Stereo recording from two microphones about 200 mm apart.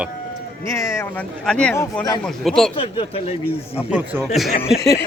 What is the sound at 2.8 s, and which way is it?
Speech, 30° left (ahead or behind).